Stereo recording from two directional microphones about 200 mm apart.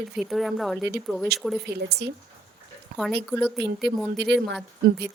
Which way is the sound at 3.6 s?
55° right (ahead or behind).